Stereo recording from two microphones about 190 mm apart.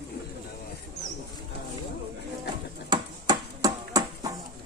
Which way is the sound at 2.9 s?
20° right (ahead or behind).